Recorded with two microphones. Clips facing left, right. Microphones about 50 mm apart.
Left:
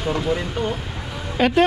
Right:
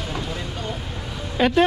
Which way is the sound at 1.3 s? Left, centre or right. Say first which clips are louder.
Left 1 dB; left.